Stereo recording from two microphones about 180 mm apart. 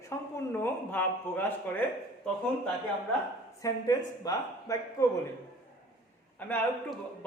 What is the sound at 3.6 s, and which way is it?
Speech, 20° left (ahead or behind).